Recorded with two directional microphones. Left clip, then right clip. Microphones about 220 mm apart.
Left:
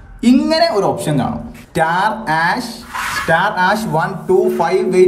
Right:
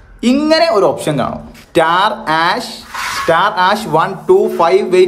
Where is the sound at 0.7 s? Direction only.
Centre (ahead or behind).